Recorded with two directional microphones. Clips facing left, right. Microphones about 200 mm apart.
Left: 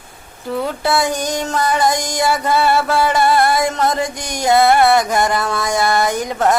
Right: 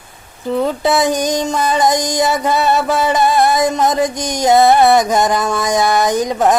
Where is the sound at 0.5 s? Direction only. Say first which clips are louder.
Right 3 dB; 20° right (ahead or behind).